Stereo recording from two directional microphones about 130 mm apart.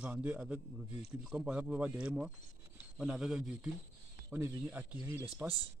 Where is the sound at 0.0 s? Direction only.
10° right (ahead or behind).